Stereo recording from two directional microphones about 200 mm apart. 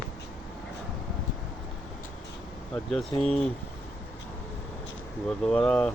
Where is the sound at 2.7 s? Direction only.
Centre (ahead or behind).